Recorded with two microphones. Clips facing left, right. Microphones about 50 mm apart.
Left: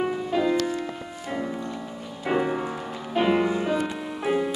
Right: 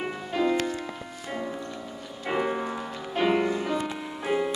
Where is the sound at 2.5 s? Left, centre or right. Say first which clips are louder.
Left 1 dB; centre.